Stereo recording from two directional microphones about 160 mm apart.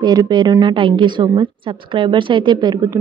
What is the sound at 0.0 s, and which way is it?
A woman's voice, 25° right (ahead or behind).